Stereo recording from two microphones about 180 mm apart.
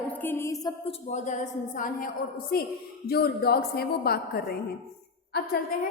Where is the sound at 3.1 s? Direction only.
60° left (ahead or behind).